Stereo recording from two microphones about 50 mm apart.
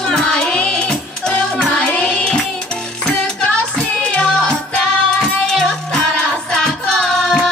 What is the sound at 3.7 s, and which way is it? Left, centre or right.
Music, centre.